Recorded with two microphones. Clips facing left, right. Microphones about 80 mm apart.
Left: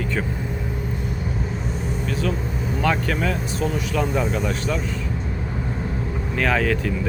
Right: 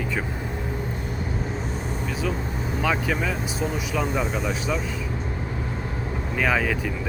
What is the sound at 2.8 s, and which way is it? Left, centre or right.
Speech, centre.